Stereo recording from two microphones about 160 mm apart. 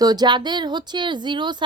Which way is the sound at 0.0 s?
25° right (ahead or behind).